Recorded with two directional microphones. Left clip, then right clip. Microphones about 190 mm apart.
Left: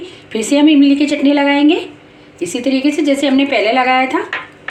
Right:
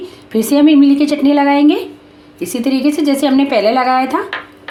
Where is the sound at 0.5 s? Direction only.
60° right (ahead or behind).